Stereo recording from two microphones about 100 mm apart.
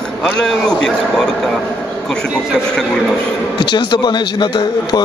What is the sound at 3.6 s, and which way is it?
Speech, 55° left (ahead or behind).